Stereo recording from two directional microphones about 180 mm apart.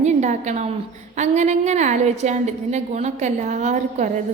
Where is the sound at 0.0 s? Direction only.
40° right (ahead or behind).